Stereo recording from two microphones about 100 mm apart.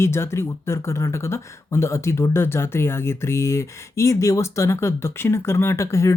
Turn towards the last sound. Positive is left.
turn(degrees=30)  # may be behind; listen again after turning